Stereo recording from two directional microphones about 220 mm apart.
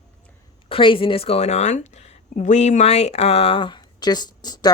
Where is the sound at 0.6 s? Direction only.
25° left (ahead or behind).